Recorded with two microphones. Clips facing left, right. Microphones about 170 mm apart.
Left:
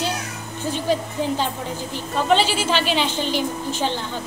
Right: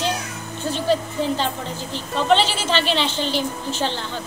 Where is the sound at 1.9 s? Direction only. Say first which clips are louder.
Right 1 dB; 10° left (ahead or behind).